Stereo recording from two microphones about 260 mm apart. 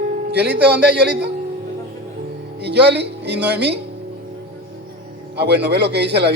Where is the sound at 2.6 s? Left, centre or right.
Right.